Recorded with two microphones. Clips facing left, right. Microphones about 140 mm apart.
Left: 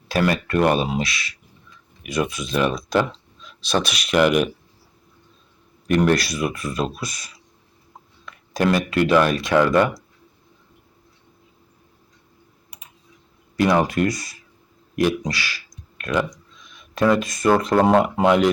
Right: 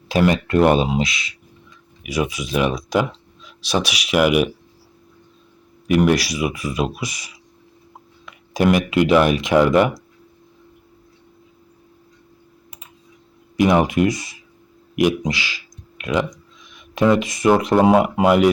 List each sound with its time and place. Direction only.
0.1 s speech: 20° right (ahead or behind)
2.0 s speech: 10° right (ahead or behind)
5.9 s speech: 10° right (ahead or behind)
13.6 s speech: 15° right (ahead or behind)